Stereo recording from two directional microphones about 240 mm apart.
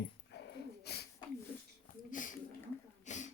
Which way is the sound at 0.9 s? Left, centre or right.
Left.